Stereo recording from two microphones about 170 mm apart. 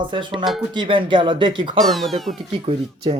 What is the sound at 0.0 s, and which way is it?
Speech, 30° right (ahead or behind).